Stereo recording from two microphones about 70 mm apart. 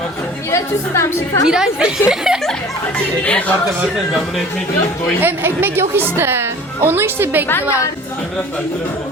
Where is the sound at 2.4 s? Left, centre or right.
Centre.